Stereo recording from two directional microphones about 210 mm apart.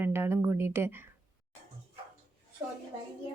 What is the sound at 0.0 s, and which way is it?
Speech, 10° right (ahead or behind).